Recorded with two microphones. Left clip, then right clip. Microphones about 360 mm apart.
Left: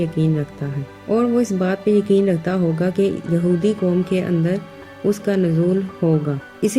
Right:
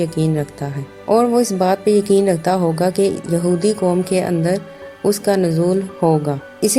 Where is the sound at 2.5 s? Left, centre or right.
Right.